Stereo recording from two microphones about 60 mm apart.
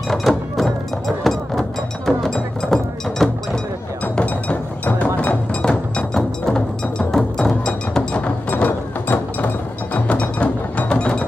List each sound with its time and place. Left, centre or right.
0.1 s music: centre
4.0 s music: left
7.6 s a sound: centre
9.9 s music: left